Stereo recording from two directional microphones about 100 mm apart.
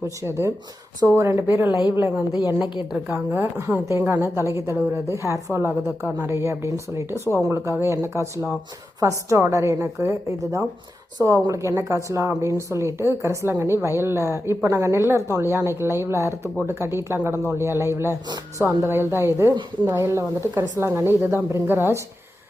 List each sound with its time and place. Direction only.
0.2 s speech: 25° right (ahead or behind)
2.0 s a woman's voice: 15° right (ahead or behind)
2.3 s a woman's voice: 45° left (ahead or behind)
3.1 s a woman's voice: 25° right (ahead or behind)